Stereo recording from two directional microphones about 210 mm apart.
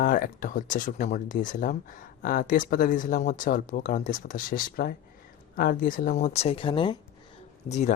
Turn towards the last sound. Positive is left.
turn(degrees=35)  # may be behind; listen again after turning